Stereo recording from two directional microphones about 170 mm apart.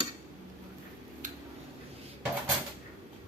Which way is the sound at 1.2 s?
50° right (ahead or behind).